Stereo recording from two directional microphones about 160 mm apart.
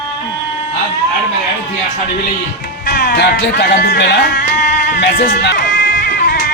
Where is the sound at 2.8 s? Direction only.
60° left (ahead or behind).